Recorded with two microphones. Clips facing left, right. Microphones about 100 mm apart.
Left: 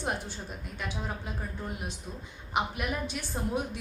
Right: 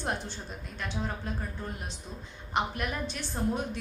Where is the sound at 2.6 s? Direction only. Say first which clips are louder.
Even; 5° left (ahead or behind).